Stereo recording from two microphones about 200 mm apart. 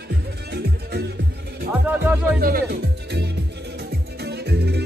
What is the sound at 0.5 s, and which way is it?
Music, 55° right (ahead or behind).